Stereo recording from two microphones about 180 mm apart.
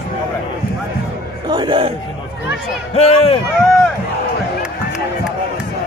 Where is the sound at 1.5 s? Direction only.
25° right (ahead or behind).